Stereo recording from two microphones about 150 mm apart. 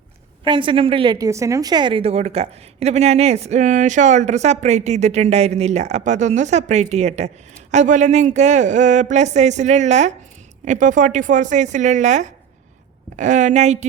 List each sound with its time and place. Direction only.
0.4 s a woman's voice: 35° right (ahead or behind); by 13.8 s 50° right (ahead or behind)